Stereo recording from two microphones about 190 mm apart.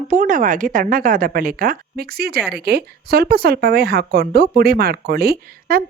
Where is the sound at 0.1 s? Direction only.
45° right (ahead or behind).